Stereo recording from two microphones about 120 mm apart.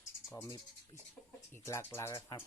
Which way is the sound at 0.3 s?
20° left (ahead or behind).